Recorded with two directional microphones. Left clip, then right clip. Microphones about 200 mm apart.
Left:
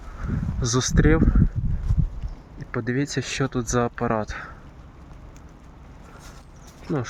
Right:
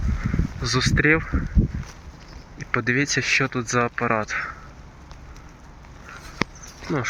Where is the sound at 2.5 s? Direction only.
15° left (ahead or behind).